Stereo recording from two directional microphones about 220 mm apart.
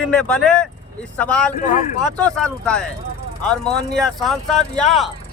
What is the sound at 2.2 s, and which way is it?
Speech, 5° left (ahead or behind).